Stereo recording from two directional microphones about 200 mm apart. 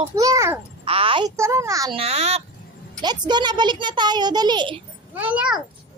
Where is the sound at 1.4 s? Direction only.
15° right (ahead or behind).